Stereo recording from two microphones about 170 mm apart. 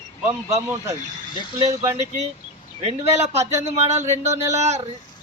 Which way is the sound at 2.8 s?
40° right (ahead or behind).